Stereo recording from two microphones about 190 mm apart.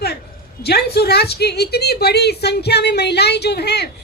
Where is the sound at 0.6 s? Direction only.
60° left (ahead or behind).